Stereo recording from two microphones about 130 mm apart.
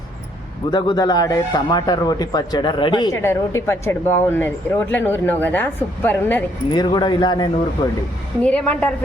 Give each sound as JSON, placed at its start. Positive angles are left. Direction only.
{"t": 0.7, "sound": "speech", "side_deg": 35}
{"t": 3.1, "sound": "speech", "side_deg": 20}
{"t": 6.7, "sound": "speech", "side_deg": 35}
{"t": 8.4, "sound": "speech", "side_deg": 10}